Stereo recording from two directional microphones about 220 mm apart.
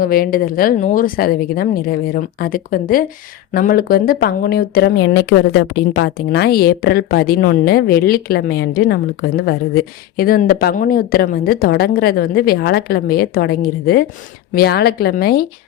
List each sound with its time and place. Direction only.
0.0 s a woman's voice: 40° left (ahead or behind)